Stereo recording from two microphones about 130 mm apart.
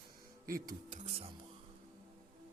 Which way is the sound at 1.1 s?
50° right (ahead or behind).